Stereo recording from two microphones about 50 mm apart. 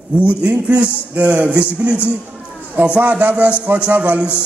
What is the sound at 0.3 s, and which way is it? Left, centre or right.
A man's voice, right.